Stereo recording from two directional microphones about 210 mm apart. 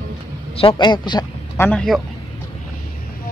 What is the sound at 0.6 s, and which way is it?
A man's voice, 25° left (ahead or behind).